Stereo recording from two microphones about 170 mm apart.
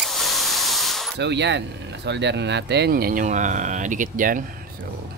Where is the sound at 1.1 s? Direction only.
90° right; by 4.4 s 50° right (ahead or behind).